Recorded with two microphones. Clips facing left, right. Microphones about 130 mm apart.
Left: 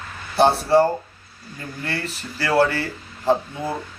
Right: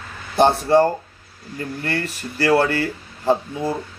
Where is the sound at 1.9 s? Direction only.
15° right (ahead or behind).